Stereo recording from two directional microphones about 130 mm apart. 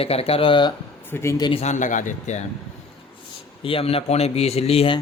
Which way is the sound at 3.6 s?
45° left (ahead or behind).